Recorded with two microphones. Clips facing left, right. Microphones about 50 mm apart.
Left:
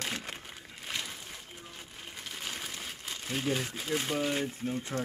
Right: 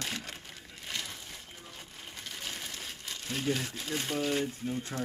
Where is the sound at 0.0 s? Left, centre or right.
Centre.